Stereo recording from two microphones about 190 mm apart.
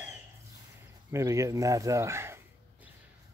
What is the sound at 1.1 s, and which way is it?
Speech, 15° right (ahead or behind).